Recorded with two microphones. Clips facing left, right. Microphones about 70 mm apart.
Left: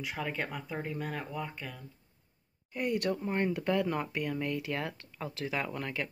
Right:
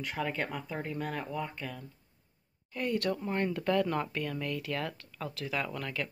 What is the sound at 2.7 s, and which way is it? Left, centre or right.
Speech, centre.